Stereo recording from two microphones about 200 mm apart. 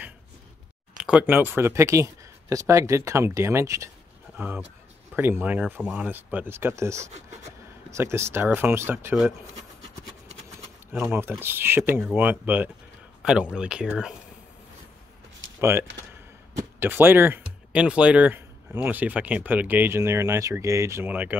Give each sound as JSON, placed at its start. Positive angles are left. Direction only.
{"t": 0.9, "sound": "speech", "side_deg": -5}
{"t": 10.9, "sound": "speech", "side_deg": -10}
{"t": 15.4, "sound": "a sound", "side_deg": -75}
{"t": 16.5, "sound": "speech", "side_deg": -10}